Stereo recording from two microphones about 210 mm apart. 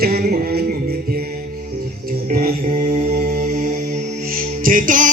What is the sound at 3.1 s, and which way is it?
Music, 45° right (ahead or behind).